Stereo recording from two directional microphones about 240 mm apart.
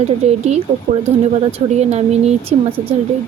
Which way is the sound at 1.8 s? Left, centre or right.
Right.